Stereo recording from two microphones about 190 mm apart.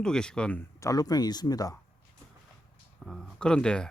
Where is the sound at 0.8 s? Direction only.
20° left (ahead or behind).